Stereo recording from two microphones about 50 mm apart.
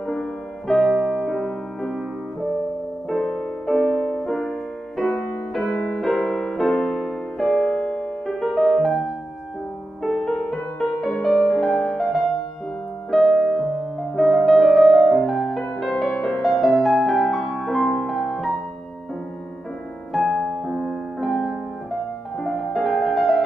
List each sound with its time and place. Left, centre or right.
0.0 s music: centre
3.1 s music: centre
10.0 s music: centre
13.1 s music: centre
20.7 s music: centre